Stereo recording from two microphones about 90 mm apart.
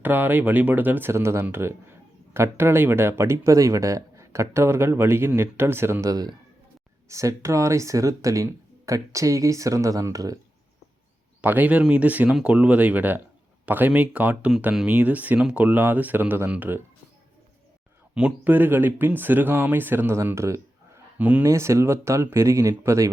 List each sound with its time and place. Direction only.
0.0 s speech: 20° right (ahead or behind)
6.1 s a man's voice: 45° right (ahead or behind)
7.1 s speech: 35° right (ahead or behind)
11.3 s speech: 20° right (ahead or behind)
18.1 s speech: 10° right (ahead or behind); by 21.0 s 30° right (ahead or behind)
21.2 s speech: 15° right (ahead or behind)
21.4 s speech: 30° right (ahead or behind)